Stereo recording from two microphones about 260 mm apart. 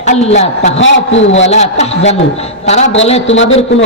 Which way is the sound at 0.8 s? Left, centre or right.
Left.